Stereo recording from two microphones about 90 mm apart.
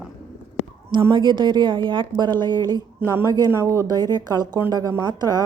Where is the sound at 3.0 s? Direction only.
25° right (ahead or behind); by 4.4 s 50° right (ahead or behind).